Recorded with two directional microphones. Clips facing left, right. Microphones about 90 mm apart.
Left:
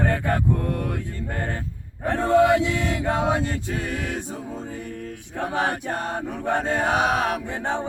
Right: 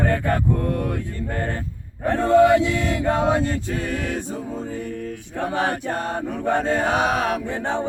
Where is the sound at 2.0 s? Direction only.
20° left (ahead or behind).